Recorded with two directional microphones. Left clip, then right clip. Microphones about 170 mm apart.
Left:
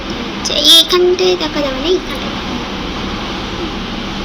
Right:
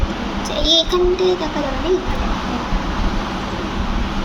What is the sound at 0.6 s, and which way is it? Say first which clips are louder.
Child singing: left 8 dB; 15° right (ahead or behind).